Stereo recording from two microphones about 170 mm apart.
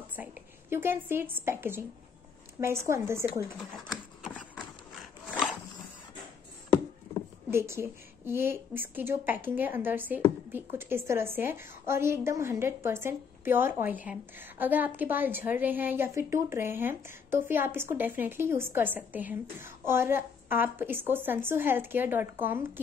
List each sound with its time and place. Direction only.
0.1 s a woman's voice: 10° right (ahead or behind)
7.5 s a woman's voice: 15° right (ahead or behind)